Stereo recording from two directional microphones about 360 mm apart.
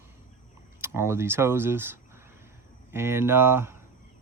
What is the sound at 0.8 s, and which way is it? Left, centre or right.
Speech, centre.